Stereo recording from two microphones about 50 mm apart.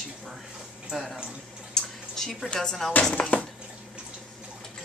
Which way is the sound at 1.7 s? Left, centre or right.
Centre.